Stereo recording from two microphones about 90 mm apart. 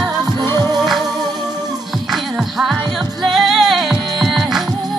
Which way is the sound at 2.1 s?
5° right (ahead or behind).